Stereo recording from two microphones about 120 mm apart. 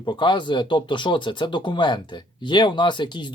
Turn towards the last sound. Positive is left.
turn(degrees=40)  # may be behind; listen again after turning